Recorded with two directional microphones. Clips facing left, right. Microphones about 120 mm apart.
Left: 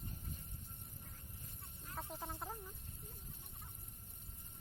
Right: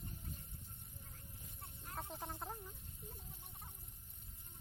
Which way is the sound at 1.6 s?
60° right (ahead or behind).